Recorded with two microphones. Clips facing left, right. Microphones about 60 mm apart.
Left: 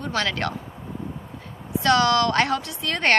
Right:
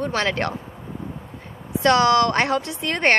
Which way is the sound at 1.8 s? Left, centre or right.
Right.